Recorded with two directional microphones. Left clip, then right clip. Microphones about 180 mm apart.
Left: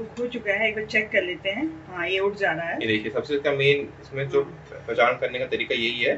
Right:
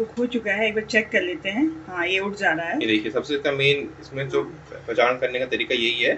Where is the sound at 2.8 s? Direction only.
5° right (ahead or behind).